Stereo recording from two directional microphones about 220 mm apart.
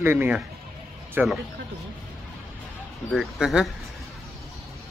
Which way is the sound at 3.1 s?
Centre (ahead or behind).